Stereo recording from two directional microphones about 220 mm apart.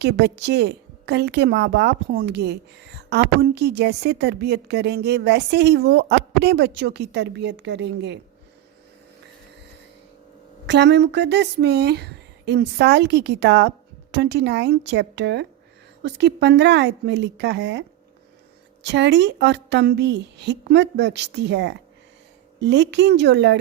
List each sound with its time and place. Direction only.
0.0 s a woman's voice: 50° right (ahead or behind)
10.7 s a woman's voice: 50° right (ahead or behind)